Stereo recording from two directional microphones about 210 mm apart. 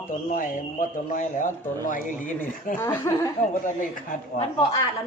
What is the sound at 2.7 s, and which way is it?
Speech, 10° left (ahead or behind).